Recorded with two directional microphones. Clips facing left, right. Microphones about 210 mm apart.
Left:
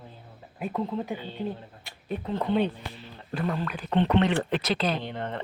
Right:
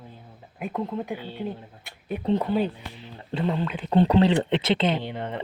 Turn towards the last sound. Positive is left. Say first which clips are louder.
# right 2 dB
turn(degrees=-10)  # may be behind; listen again after turning